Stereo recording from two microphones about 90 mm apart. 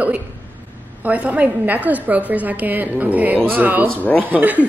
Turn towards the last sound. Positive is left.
turn(degrees=-20)  # may be behind; listen again after turning